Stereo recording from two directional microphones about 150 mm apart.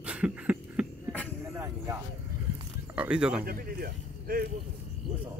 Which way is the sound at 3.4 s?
85° right.